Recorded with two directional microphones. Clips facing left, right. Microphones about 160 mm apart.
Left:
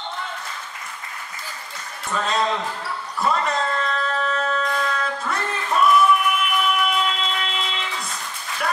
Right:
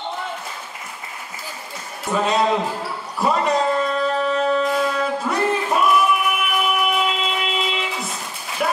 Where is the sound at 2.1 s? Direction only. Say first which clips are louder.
Right 4 dB; 10° right (ahead or behind).